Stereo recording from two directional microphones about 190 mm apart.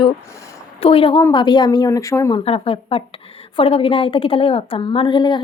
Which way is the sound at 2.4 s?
30° left (ahead or behind).